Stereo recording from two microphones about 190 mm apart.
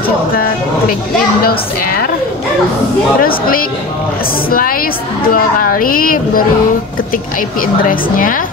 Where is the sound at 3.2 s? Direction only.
50° left (ahead or behind).